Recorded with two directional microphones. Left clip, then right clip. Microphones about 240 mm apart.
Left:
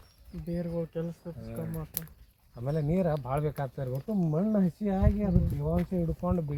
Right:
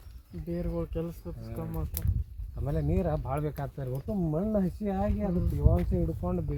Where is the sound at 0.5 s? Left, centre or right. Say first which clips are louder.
Even; right.